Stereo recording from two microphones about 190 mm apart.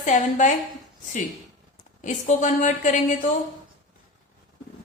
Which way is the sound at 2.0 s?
40° left (ahead or behind).